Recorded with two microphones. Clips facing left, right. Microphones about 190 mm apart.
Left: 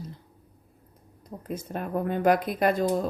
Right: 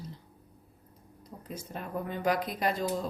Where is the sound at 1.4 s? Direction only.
55° left (ahead or behind).